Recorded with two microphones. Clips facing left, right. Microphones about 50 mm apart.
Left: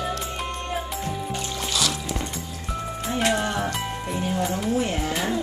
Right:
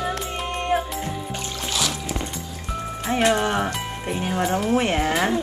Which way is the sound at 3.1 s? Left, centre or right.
Right.